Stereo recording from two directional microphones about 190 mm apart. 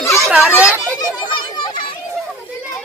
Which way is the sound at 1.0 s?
25° left (ahead or behind).